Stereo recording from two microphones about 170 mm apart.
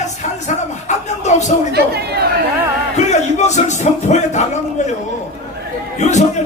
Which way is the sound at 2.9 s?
40° left (ahead or behind).